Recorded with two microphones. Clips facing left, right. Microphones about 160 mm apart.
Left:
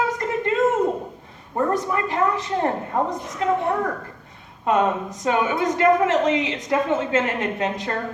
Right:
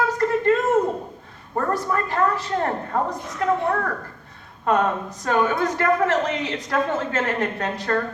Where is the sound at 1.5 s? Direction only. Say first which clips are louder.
Left 1 dB; 20° left (ahead or behind).